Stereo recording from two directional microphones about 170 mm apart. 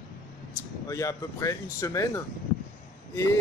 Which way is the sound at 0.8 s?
20° left (ahead or behind).